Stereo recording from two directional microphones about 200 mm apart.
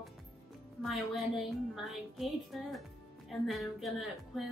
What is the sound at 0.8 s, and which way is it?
A woman's voice, centre (ahead or behind).